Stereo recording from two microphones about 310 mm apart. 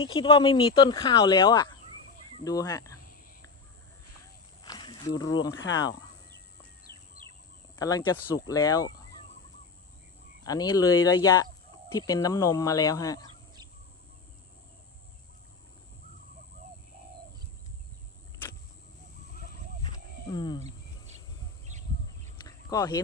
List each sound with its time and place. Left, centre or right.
0.0 s speech: centre
4.6 s wild animals: centre
5.5 s speech: left
7.8 s speech: centre
10.4 s speech: centre
19.8 s wild animals: centre
22.4 s a sound: centre